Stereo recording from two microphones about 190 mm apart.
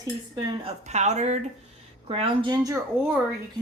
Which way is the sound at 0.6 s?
35° right (ahead or behind).